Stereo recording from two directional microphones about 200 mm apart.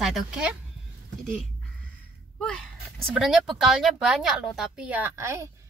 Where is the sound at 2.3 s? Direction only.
5° left (ahead or behind).